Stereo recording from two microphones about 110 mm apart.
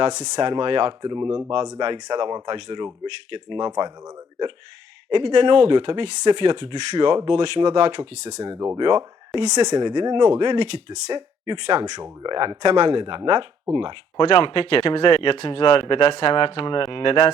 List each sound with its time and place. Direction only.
0.0 s speech: 40° right (ahead or behind)
1.1 s speech: 30° right (ahead or behind); by 3.7 s 45° right (ahead or behind)
3.7 s speech: 35° right (ahead or behind)
8.8 s speech: 40° right (ahead or behind)
14.2 s speech: 50° left (ahead or behind)